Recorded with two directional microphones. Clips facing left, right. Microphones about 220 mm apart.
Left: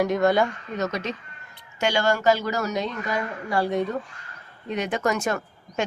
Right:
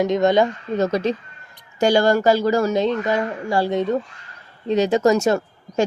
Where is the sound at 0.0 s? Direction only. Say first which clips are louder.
Right 4 dB; 20° right (ahead or behind).